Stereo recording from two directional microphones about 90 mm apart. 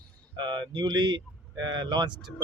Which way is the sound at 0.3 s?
55° right (ahead or behind).